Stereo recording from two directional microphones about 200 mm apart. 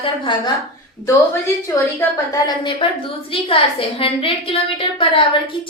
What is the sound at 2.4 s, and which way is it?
A woman's voice, 25° left (ahead or behind).